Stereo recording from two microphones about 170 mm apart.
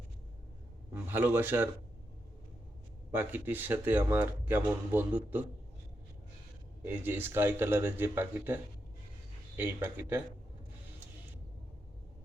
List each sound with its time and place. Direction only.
0.9 s speech: 10° right (ahead or behind)
3.1 s speech: 15° right (ahead or behind)
6.8 s speech: 10° right (ahead or behind)
9.6 s speech: 10° right (ahead or behind)